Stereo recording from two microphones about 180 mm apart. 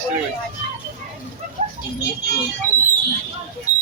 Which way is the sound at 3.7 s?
10° right (ahead or behind).